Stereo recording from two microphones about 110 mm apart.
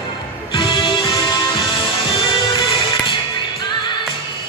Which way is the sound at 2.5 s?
45° left (ahead or behind).